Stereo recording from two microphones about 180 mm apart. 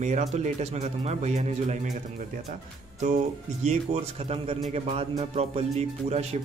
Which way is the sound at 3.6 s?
35° right (ahead or behind).